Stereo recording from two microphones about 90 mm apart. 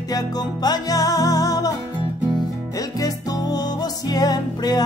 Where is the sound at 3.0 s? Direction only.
45° left (ahead or behind).